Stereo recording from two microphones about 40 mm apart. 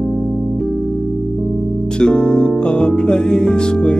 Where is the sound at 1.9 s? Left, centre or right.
Left.